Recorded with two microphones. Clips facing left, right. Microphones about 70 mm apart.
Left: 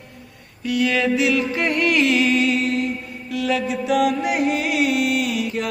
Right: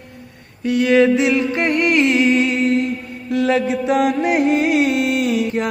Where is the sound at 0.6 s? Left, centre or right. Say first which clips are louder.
Right 6 dB; right.